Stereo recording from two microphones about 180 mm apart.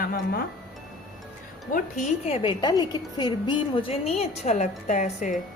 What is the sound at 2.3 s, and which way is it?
A woman's voice, 25° left (ahead or behind).